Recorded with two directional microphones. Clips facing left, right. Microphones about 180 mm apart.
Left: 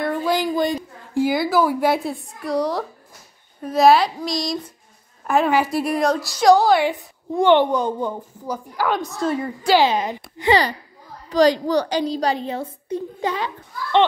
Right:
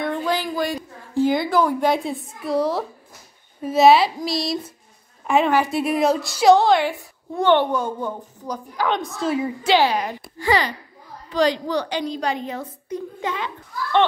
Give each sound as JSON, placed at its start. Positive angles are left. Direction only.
{"t": 0.0, "sound": "a sound", "side_deg": 5}
{"t": 1.2, "sound": "a woman's voice", "side_deg": 5}
{"t": 6.8, "sound": "a woman's voice", "side_deg": 15}
{"t": 9.8, "sound": "speech", "side_deg": 20}
{"t": 11.2, "sound": "a woman's voice", "side_deg": 40}